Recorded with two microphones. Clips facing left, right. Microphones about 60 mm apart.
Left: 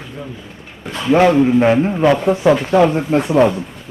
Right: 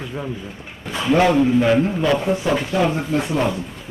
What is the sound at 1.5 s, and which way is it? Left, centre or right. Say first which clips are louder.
A man's voice: left 3 dB; left.